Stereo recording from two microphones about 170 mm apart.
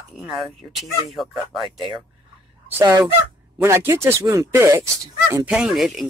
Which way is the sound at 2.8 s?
20° right (ahead or behind).